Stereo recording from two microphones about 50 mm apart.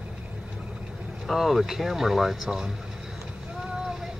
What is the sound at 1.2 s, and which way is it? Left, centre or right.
Speech, centre.